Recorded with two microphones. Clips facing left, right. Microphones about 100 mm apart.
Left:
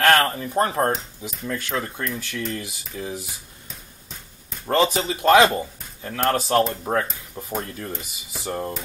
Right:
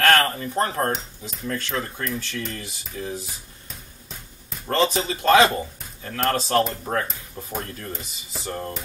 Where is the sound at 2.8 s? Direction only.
10° left (ahead or behind).